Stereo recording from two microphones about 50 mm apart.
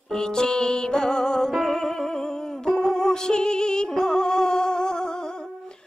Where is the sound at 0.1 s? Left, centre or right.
Centre.